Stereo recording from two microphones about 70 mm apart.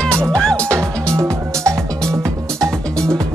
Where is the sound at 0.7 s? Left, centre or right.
Right.